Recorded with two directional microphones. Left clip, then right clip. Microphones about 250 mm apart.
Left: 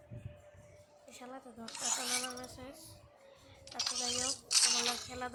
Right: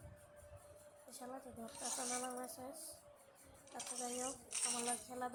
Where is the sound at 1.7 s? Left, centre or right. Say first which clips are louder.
Left 9 dB; left.